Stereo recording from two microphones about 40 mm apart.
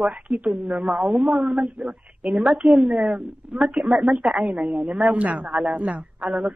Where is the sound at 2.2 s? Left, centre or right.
Centre.